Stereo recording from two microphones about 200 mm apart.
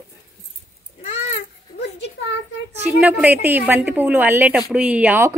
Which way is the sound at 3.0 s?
5° right (ahead or behind).